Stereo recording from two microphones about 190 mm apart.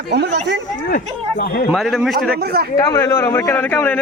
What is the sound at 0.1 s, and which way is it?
Speech, 60° right (ahead or behind).